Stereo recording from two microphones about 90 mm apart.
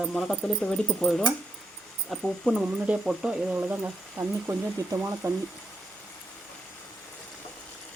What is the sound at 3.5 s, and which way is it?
Speech, 20° right (ahead or behind).